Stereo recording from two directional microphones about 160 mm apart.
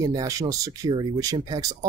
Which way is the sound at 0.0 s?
20° right (ahead or behind).